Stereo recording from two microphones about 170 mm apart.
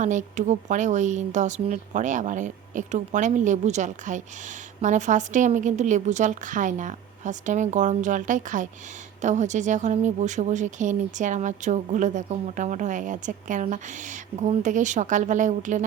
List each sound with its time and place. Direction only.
0.0 s speech: 45° right (ahead or behind)